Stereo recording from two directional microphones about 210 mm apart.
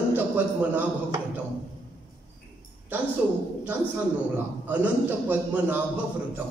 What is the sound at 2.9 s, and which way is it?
Speech, 10° right (ahead or behind).